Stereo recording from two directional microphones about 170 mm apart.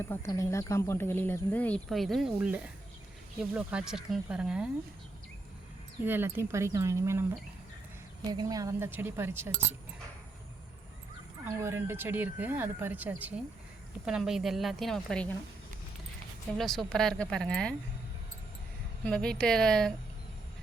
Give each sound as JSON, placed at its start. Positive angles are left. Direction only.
{"t": 0.0, "sound": "a woman's voice", "side_deg": 15}
{"t": 6.1, "sound": "speech", "side_deg": -10}
{"t": 8.3, "sound": "speech", "side_deg": -20}
{"t": 11.4, "sound": "a woman's voice", "side_deg": -15}
{"t": 16.6, "sound": "a woman's voice", "side_deg": 0}
{"t": 19.0, "sound": "a woman's voice", "side_deg": 5}